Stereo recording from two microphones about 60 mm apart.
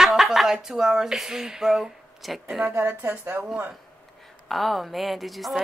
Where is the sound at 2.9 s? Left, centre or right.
Right.